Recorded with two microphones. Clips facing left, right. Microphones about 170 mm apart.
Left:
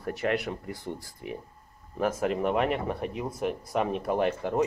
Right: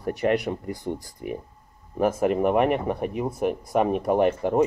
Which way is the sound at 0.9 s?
50° right (ahead or behind).